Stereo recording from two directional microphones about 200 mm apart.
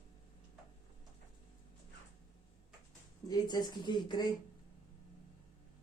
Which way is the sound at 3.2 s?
20° left (ahead or behind).